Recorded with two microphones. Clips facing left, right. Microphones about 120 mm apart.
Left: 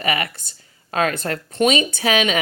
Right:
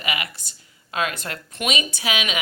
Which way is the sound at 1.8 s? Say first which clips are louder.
Left 7 dB; 45° left (ahead or behind).